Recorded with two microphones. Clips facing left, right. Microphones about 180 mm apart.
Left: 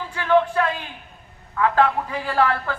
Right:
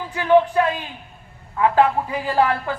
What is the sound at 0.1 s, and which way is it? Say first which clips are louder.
A man's voice: right 3 dB; 15° right (ahead or behind).